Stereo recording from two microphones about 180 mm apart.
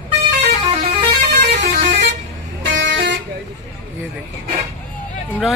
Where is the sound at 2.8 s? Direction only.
85° right.